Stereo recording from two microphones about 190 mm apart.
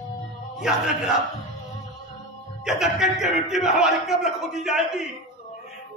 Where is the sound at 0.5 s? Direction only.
5° right (ahead or behind).